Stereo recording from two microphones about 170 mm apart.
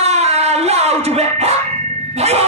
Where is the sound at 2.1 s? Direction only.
40° right (ahead or behind).